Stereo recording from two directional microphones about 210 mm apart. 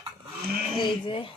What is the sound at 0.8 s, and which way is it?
Speech, 25° left (ahead or behind).